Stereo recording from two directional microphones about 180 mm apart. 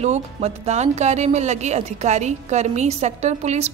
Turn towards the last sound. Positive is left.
turn(degrees=-40)  # may be behind; listen again after turning